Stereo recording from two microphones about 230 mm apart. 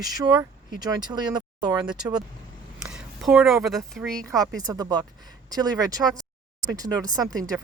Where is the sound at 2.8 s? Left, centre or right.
Centre.